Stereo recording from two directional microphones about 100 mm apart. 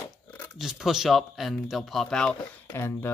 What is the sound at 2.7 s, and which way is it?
Speech, 25° left (ahead or behind).